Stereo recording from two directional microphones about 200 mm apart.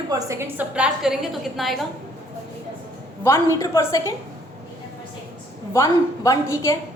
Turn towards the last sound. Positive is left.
turn(degrees=15)  # may be behind; listen again after turning